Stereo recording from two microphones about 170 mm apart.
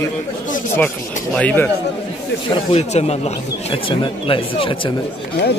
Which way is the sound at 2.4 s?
30° left (ahead or behind).